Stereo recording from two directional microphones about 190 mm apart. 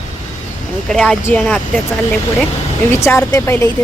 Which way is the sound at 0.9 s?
5° left (ahead or behind).